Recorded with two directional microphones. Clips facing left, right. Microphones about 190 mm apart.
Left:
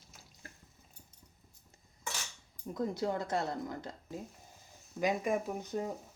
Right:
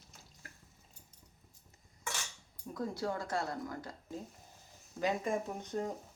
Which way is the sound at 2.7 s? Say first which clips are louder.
Left 3 dB; 20° left (ahead or behind).